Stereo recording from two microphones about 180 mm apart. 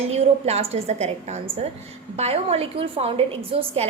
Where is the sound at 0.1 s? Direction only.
35° right (ahead or behind).